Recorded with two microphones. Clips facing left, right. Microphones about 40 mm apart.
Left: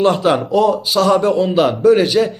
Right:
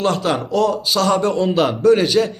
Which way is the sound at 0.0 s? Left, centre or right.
Centre.